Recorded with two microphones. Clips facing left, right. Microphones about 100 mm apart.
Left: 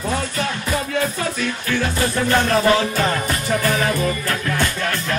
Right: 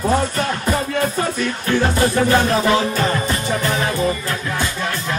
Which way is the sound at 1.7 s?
35° right (ahead or behind).